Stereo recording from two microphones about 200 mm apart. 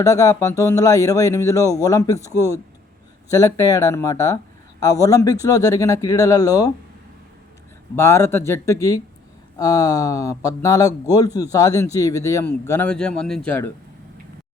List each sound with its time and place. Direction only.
0.0 s speech: 15° left (ahead or behind)
7.9 s speech: 15° left (ahead or behind)